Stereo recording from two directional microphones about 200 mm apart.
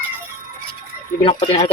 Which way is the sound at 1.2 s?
30° left (ahead or behind).